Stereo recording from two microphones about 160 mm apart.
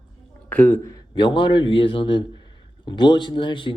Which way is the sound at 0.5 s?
15° left (ahead or behind).